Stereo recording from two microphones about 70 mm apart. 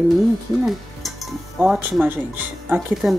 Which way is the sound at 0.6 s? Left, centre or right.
Centre.